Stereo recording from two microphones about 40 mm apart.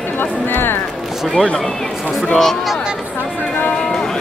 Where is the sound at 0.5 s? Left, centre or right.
Left.